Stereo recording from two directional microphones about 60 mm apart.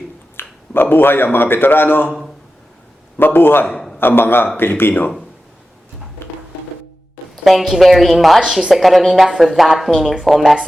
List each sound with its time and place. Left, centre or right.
0.3 s speech: left
3.2 s speech: left
3.7 s a sound: centre
3.9 s a man's voice: left
7.4 s a woman's voice: centre